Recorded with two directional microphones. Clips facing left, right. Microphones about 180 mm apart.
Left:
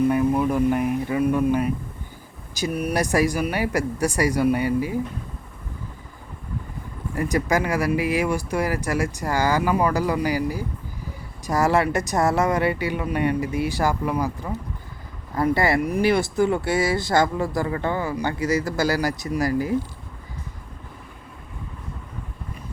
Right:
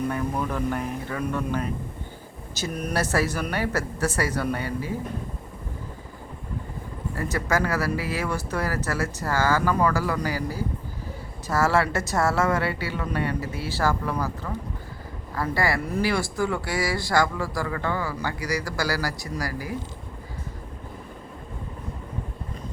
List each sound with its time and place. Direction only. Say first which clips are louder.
0.1 s speech: left 7 dB; 10° left (ahead or behind)
7.2 s speech: left 4 dB; 15° left (ahead or behind)